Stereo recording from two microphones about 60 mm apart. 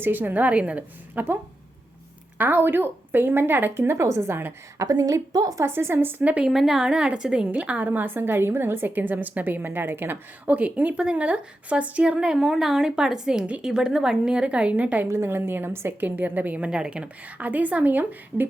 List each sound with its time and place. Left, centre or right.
0.0 s a woman's voice: right
2.4 s a woman's voice: right
4.8 s a woman's voice: right
5.6 s a woman's voice: right
6.4 s a woman's voice: centre; by 15.0 s right
15.0 s a woman's voice: right